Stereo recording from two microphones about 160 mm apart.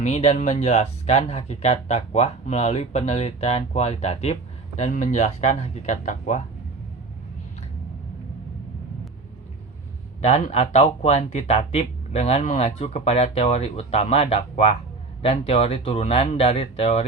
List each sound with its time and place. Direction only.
0.0 s speech: 45° left (ahead or behind)
4.9 s speech: 50° left (ahead or behind)
10.2 s speech: 45° left (ahead or behind)